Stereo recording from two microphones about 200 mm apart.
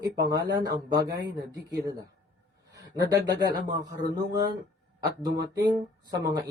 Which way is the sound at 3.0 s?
20° right (ahead or behind).